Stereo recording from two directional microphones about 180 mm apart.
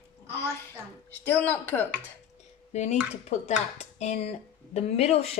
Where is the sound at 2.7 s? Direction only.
40° left (ahead or behind).